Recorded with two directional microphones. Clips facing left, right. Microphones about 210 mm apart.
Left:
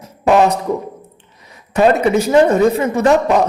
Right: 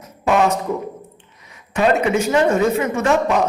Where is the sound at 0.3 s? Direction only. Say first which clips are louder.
Left 4 dB; 35° left (ahead or behind).